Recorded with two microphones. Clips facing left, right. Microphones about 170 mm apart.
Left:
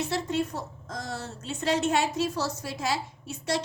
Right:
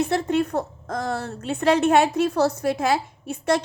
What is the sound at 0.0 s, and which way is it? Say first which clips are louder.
A woman's voice: right 7 dB; 55° right (ahead or behind).